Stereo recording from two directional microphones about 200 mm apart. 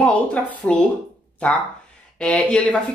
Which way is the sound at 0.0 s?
5° left (ahead or behind).